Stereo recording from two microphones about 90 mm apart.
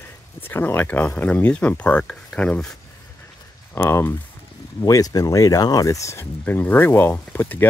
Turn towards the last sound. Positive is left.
turn(degrees=20)  # may be behind; listen again after turning